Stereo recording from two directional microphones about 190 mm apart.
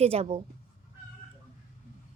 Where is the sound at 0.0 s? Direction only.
30° right (ahead or behind).